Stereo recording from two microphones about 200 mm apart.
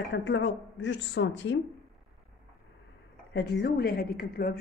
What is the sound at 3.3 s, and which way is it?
Speech, 55° left (ahead or behind).